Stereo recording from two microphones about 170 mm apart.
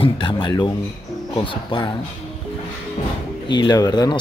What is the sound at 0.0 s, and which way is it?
Speech, 30° left (ahead or behind).